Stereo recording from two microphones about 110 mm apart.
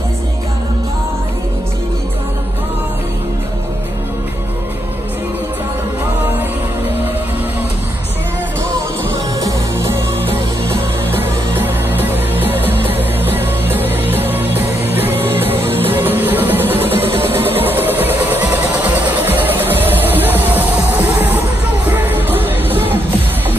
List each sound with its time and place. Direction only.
9.4 s music: 25° right (ahead or behind)
10.2 s music: 55° right (ahead or behind)
11.5 s music: 20° right (ahead or behind)
17.2 s a sound: 20° right (ahead or behind)
21.8 s music: 15° right (ahead or behind)